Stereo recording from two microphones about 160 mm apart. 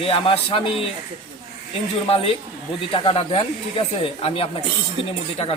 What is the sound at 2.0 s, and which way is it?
A man's voice, 35° left (ahead or behind).